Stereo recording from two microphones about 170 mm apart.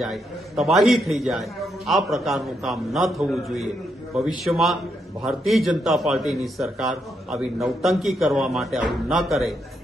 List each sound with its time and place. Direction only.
0.0 s a man's voice: centre (ahead or behind)